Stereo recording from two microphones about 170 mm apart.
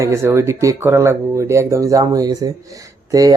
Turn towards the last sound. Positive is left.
turn(degrees=-20)  # may be behind; listen again after turning